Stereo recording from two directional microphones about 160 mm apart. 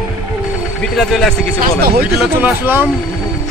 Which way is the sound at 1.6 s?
70° right (ahead or behind).